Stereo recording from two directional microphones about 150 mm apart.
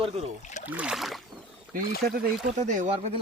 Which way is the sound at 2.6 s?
55° right (ahead or behind).